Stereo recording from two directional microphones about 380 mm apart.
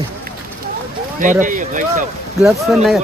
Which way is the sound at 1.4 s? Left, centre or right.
Centre.